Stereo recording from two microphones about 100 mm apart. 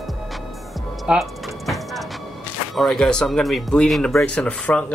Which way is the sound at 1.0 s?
5° right (ahead or behind).